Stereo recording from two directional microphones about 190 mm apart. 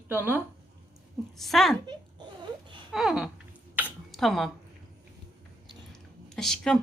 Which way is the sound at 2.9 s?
Centre (ahead or behind).